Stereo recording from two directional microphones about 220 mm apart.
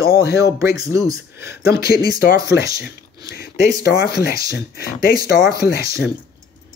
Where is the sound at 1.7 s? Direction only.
45° left (ahead or behind).